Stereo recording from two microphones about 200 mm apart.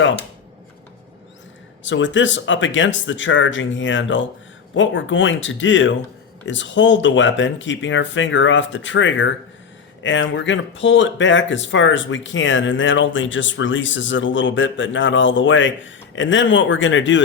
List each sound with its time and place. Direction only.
1.8 s speech: 70° left (ahead or behind)